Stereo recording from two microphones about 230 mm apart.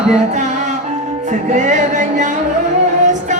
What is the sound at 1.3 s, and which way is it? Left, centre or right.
Music, right.